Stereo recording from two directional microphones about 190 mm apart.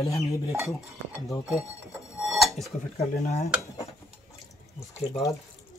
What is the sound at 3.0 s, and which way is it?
Speech, 35° left (ahead or behind).